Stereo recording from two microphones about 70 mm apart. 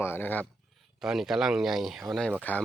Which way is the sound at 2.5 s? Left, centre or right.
Left.